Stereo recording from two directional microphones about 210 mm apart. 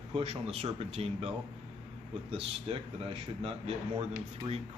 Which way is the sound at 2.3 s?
25° right (ahead or behind).